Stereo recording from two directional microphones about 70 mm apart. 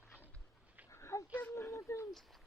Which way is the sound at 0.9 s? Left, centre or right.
Left.